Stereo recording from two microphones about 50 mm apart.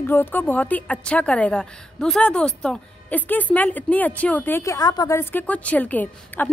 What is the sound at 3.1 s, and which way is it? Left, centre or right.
A woman's voice, left.